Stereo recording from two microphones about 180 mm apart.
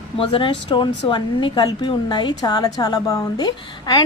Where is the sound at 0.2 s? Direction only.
30° left (ahead or behind).